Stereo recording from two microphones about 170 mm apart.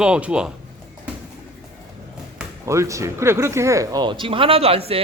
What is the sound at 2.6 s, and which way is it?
A man's voice, 15° right (ahead or behind).